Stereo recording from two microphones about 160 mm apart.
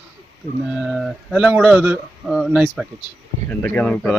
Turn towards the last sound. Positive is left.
turn(degrees=5)  # may be behind; listen again after turning